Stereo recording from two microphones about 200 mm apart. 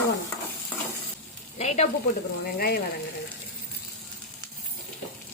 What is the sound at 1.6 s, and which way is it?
Sizzle, 35° left (ahead or behind).